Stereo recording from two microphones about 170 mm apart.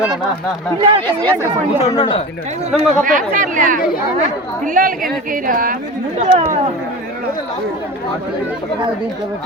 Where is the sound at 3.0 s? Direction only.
50° right (ahead or behind).